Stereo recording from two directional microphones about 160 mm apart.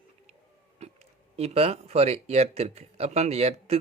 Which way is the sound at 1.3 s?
40° right (ahead or behind).